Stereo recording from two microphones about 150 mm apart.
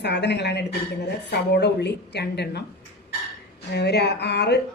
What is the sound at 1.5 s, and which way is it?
Speech, 90° left.